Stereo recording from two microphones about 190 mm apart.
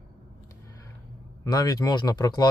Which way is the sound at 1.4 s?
20° left (ahead or behind).